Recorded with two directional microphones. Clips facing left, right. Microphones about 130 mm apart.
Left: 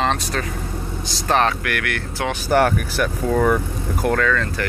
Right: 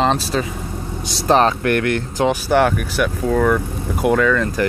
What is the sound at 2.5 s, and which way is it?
Speech, centre (ahead or behind).